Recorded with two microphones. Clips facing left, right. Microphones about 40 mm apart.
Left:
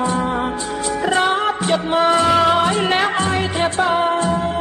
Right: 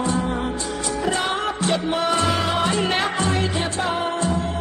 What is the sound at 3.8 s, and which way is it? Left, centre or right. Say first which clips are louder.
Music: left 7 dB; left.